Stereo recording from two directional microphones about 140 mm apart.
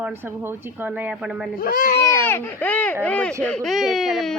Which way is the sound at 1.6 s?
75° left (ahead or behind).